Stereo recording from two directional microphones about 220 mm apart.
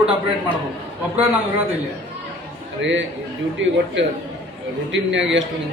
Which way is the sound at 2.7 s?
55° right (ahead or behind).